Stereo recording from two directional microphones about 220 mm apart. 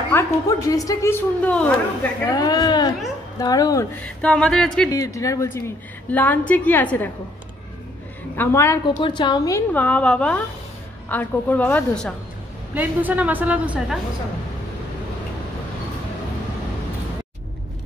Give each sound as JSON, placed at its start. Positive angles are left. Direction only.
{"t": 0.1, "sound": "a woman's voice", "side_deg": 15}
{"t": 2.2, "sound": "a woman's voice", "side_deg": 15}
{"t": 4.0, "sound": "speech", "side_deg": 5}
{"t": 4.9, "sound": "a woman's voice", "side_deg": 15}
{"t": 8.4, "sound": "a woman's voice", "side_deg": 10}
{"t": 12.7, "sound": "a woman's voice", "side_deg": -5}